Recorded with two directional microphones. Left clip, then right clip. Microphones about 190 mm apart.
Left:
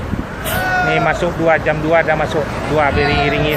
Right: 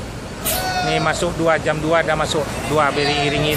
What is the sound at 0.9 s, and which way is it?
Speech, 15° right (ahead or behind).